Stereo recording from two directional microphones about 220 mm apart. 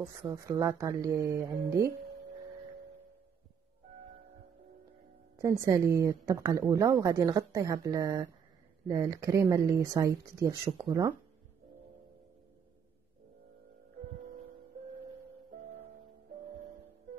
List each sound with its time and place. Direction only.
0.0 s a woman's voice: 15° right (ahead or behind)
5.4 s a woman's voice: 15° right (ahead or behind)